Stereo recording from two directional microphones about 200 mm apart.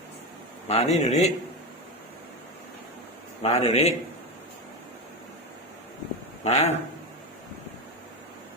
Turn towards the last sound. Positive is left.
turn(degrees=35)  # may be behind; listen again after turning